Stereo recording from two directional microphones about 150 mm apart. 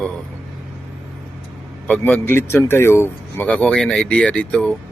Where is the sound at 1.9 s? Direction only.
10° left (ahead or behind).